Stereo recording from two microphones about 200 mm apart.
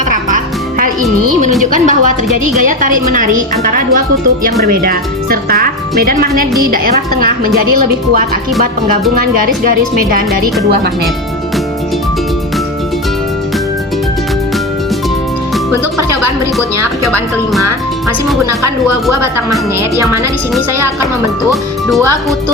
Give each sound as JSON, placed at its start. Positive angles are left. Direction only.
{"t": 0.1, "sound": "music", "side_deg": -40}
{"t": 1.7, "sound": "a woman's voice", "side_deg": -40}
{"t": 9.6, "sound": "speech", "side_deg": -45}
{"t": 21.5, "sound": "speech", "side_deg": 0}